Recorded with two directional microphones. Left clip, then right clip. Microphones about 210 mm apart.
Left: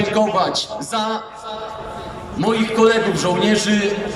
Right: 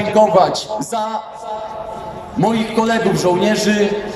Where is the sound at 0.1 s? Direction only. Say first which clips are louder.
Right 9 dB; 30° right (ahead or behind).